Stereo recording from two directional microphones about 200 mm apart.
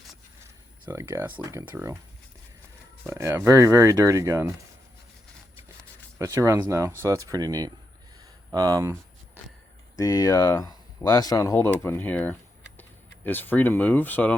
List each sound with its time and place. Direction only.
0.9 s speech: 10° right (ahead or behind)
3.1 s speech: 15° right (ahead or behind)
6.1 s speech: 15° right (ahead or behind)
10.0 s speech: 20° left (ahead or behind)